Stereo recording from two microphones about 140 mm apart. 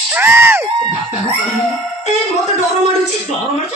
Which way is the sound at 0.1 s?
15° right (ahead or behind).